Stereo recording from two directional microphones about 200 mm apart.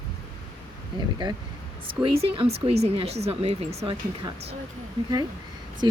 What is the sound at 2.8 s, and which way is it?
Speech, 30° right (ahead or behind).